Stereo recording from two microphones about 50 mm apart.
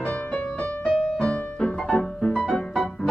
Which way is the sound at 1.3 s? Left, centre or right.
Centre.